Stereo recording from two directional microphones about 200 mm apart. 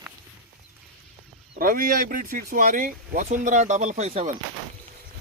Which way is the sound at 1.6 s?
45° right (ahead or behind).